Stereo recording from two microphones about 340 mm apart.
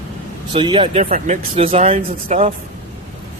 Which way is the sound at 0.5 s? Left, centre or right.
Centre.